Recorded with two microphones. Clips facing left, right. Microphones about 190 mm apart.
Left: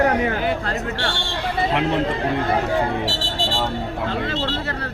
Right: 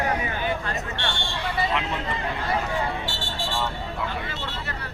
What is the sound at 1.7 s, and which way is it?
Speech, 65° left (ahead or behind).